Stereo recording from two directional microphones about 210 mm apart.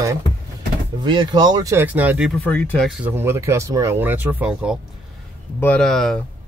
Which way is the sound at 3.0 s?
10° right (ahead or behind).